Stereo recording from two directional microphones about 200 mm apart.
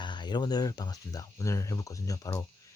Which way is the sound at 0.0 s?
20° left (ahead or behind).